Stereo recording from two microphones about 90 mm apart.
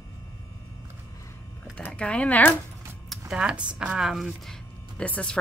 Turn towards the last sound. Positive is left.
turn(degrees=15)  # may be behind; listen again after turning